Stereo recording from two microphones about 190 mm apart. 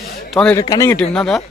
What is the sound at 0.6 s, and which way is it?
Speech, 15° left (ahead or behind).